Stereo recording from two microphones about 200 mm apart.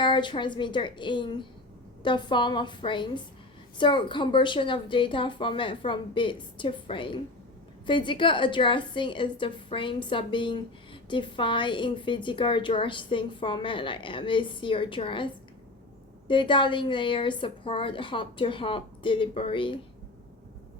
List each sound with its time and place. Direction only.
0.0 s a woman's voice: 25° left (ahead or behind)